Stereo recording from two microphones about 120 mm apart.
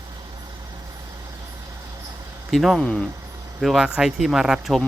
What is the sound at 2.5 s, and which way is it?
Speech, centre (ahead or behind).